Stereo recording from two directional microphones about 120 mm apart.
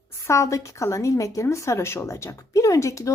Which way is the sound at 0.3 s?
25° left (ahead or behind).